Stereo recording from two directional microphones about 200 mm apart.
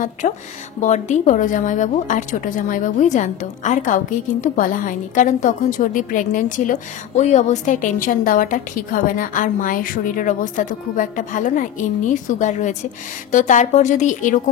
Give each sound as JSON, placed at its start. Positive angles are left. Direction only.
{"t": 0.2, "sound": "a woman's voice", "side_deg": 40}